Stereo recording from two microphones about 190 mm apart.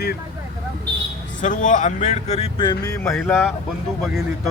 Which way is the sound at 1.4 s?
40° left (ahead or behind).